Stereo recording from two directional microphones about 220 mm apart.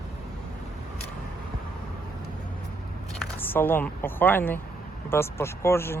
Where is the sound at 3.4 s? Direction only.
10° left (ahead or behind).